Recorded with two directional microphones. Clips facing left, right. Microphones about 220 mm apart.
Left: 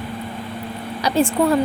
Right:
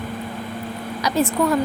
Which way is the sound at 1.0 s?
30° left (ahead or behind).